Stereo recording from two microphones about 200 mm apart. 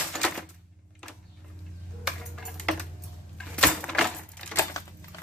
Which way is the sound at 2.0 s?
Centre (ahead or behind).